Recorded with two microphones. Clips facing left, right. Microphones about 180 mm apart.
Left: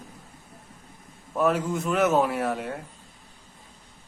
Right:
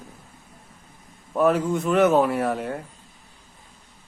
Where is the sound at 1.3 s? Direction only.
Centre (ahead or behind).